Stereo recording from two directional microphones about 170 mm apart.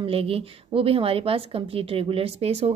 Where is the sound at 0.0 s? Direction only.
35° right (ahead or behind).